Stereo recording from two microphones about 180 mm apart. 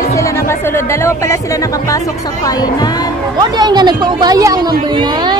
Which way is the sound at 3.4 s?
25° right (ahead or behind).